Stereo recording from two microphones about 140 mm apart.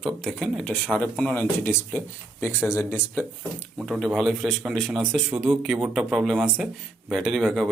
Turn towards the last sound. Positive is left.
turn(degrees=0)  # may be behind; listen again after turning